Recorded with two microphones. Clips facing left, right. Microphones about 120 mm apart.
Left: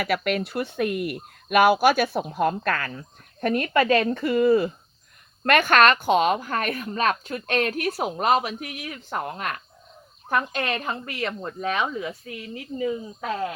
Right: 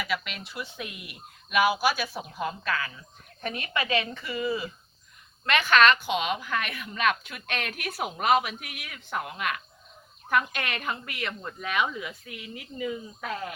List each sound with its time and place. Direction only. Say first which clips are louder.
0.0 s a woman's voice: left 9 dB; 55° left (ahead or behind); by 13.3 s 30° left (ahead or behind)